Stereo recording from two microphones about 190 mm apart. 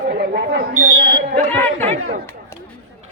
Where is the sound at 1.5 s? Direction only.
10° left (ahead or behind).